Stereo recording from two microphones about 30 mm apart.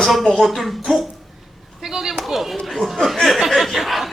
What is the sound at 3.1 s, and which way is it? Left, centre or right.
Speech, centre.